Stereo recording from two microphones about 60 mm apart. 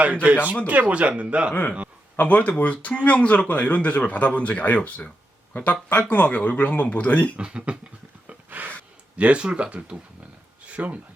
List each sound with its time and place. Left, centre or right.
0.0 s a man's voice: right
2.1 s speech: left
7.3 s a man's voice: centre
8.3 s gasp: right
9.1 s a man's voice: right
10.6 s a sound: right